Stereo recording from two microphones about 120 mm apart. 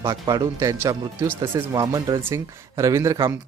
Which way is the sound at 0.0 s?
30° right (ahead or behind).